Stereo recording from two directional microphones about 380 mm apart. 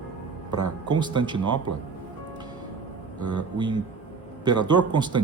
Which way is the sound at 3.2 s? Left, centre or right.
Right.